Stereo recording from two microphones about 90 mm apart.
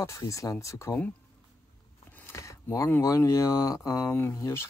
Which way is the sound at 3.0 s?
35° left (ahead or behind).